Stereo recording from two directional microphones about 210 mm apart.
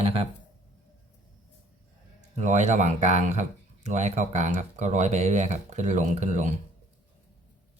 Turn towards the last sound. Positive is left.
turn(degrees=-35)  # may be behind; listen again after turning